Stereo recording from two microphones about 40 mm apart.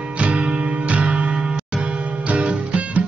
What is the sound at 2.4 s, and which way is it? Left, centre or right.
Music, right.